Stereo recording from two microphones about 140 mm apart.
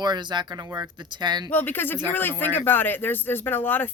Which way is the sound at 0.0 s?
30° right (ahead or behind).